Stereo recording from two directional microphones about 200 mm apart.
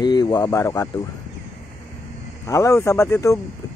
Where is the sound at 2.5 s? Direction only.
15° left (ahead or behind).